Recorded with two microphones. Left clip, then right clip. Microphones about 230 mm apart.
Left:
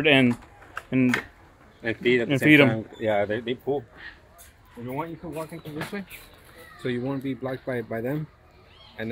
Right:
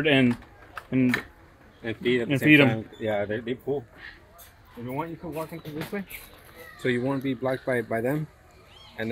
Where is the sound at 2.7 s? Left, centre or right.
Left.